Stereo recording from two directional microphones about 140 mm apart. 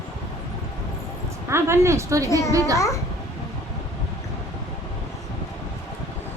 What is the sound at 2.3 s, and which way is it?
Speech, 20° left (ahead or behind).